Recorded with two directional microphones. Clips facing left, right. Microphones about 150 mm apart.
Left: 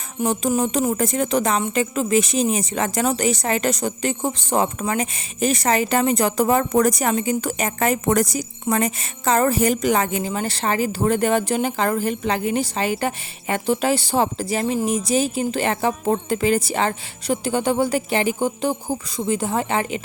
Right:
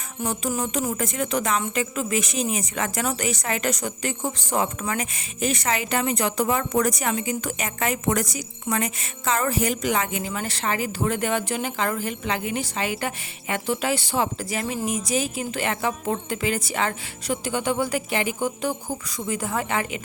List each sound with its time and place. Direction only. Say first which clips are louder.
0.2 s music: left 6 dB; 25° left (ahead or behind)
0.9 s speech: left 5 dB; 35° left (ahead or behind)